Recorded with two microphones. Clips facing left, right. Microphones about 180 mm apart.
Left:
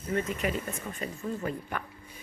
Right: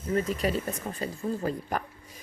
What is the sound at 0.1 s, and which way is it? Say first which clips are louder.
Speech: right 3 dB; 35° right (ahead or behind).